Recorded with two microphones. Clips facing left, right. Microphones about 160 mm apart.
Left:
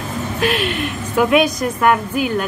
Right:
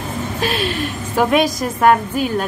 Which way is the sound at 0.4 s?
30° right (ahead or behind).